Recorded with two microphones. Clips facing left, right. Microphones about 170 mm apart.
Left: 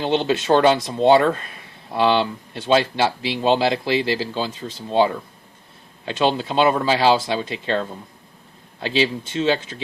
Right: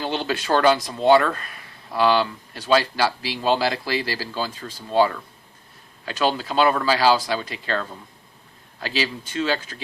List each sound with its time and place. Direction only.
0.0 s speech: 25° left (ahead or behind)